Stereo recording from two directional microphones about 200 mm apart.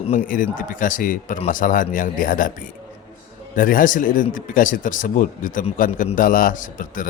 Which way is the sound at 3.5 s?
45° left (ahead or behind).